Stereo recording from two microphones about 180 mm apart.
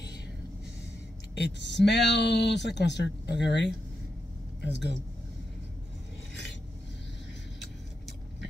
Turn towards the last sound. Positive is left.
turn(degrees=80)